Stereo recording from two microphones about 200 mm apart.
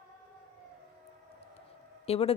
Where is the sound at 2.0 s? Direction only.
30° left (ahead or behind).